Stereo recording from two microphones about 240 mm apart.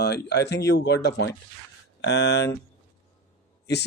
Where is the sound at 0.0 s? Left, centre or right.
Left.